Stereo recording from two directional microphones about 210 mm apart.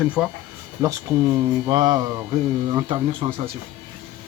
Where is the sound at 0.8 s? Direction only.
15° right (ahead or behind).